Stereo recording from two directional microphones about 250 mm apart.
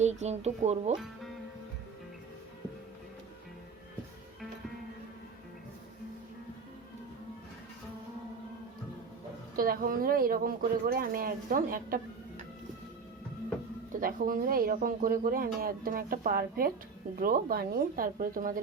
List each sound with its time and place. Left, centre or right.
0.0 s speech: right
9.6 s speech: right
13.9 s speech: right